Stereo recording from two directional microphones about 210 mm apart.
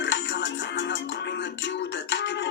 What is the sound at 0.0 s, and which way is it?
Music, 55° left (ahead or behind).